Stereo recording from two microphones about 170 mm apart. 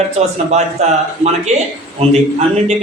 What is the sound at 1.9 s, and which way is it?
Speech, 40° right (ahead or behind).